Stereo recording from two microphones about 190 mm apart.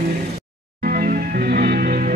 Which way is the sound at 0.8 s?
50° right (ahead or behind).